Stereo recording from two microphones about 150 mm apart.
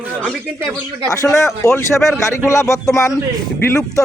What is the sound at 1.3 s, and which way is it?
Speech, 20° left (ahead or behind).